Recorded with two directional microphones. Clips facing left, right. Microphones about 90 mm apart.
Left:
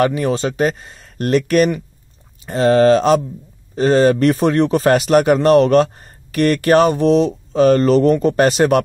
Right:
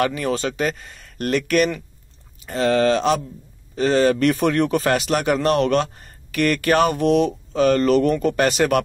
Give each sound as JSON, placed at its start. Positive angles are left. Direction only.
{"t": 0.1, "sound": "a man's voice", "side_deg": 30}